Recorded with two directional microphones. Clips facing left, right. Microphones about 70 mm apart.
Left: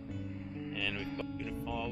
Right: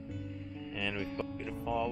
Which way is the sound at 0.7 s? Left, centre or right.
Centre.